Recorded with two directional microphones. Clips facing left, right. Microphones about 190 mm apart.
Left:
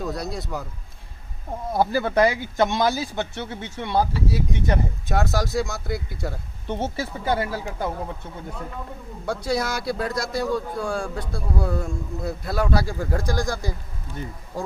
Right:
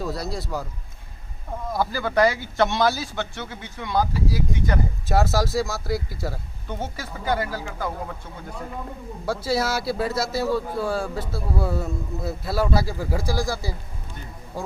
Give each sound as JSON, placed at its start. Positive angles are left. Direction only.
{"t": 0.0, "sound": "a man's voice", "side_deg": 0}
{"t": 1.7, "sound": "speech", "side_deg": 25}
{"t": 5.0, "sound": "a man's voice", "side_deg": 0}
{"t": 6.7, "sound": "speech", "side_deg": 25}
{"t": 9.2, "sound": "a man's voice", "side_deg": -5}